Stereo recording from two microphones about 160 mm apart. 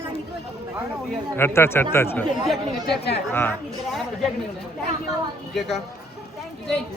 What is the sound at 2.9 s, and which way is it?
Speech, 90° left.